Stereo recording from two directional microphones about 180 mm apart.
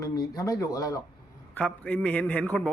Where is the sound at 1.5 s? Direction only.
10° left (ahead or behind).